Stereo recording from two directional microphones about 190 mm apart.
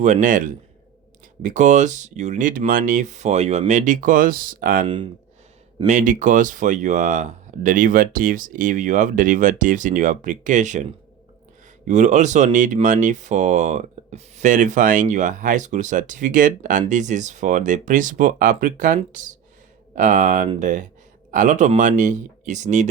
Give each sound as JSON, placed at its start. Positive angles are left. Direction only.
{"t": 0.0, "sound": "speech", "side_deg": -40}
{"t": 11.9, "sound": "speech", "side_deg": -40}